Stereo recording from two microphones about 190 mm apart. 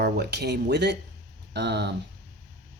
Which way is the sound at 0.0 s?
60° right (ahead or behind).